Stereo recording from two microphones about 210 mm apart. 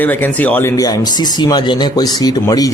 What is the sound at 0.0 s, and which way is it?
A man's voice, 10° left (ahead or behind).